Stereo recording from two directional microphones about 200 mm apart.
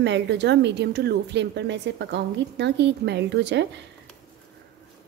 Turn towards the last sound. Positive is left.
turn(degrees=-60)  # may be behind; listen again after turning